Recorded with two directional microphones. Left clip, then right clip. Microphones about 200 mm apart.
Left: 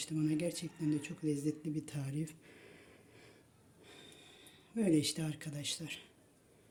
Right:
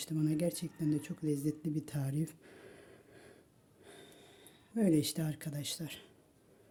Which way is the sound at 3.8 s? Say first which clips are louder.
Right 1 dB; 55° right (ahead or behind).